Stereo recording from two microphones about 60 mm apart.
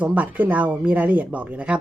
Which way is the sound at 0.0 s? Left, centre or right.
Right.